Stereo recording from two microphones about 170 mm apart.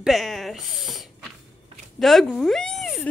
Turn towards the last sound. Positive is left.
turn(degrees=0)  # may be behind; listen again after turning